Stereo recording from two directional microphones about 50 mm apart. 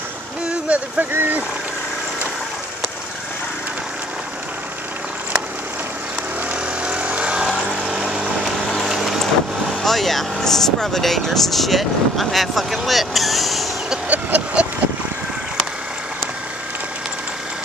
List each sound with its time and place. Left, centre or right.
0.5 s a sound: right
1.1 s speech: right
6.5 s vehicle: right
8.7 s vehicle: centre
9.8 s speech: centre
14.0 s vehicle: right